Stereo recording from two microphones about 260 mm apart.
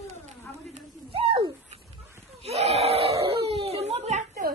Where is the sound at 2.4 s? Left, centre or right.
Right.